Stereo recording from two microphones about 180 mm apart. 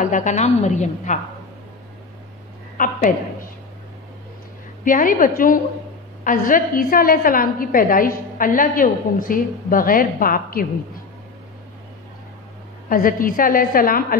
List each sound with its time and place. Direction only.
0.0 s a woman's voice: 45° left (ahead or behind)
2.8 s a woman's voice: 45° left (ahead or behind)
4.8 s a woman's voice: 50° left (ahead or behind)
12.9 s a woman's voice: 50° left (ahead or behind)